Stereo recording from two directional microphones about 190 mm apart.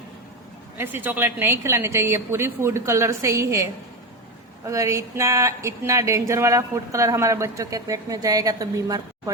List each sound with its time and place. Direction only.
0.8 s speech: 10° right (ahead or behind)